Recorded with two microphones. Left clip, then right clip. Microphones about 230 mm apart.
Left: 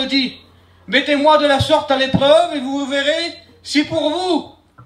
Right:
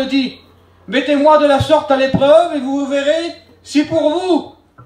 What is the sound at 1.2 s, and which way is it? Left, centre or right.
A man's voice, left.